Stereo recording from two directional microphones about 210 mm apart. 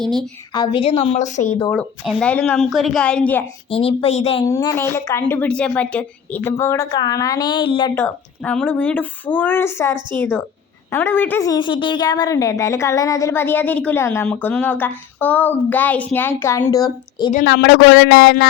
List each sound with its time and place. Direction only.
0.5 s a woman's voice: 20° left (ahead or behind)
1.7 s speech: 5° left (ahead or behind)
3.7 s a woman's voice: 25° left (ahead or behind)
4.4 s a woman's voice: 15° left (ahead or behind)
7.9 s a woman's voice: 5° left (ahead or behind)
17.4 s speech: 55° left (ahead or behind)